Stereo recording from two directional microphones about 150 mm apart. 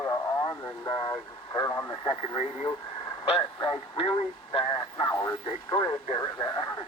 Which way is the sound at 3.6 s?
35° left (ahead or behind).